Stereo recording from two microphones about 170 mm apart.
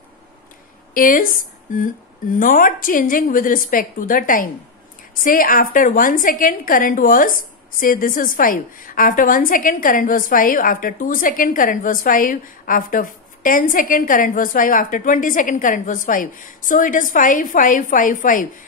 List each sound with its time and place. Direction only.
0.9 s a woman's voice: 55° left (ahead or behind)